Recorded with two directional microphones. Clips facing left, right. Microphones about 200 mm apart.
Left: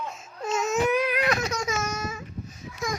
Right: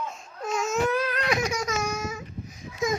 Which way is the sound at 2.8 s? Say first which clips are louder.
Right 5 dB; 20° right (ahead or behind).